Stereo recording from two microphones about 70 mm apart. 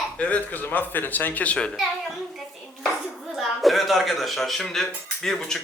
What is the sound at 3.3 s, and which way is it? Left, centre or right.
A child's voice, centre.